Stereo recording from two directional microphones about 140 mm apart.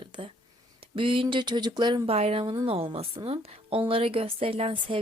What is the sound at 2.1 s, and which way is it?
A woman's voice, 45° right (ahead or behind).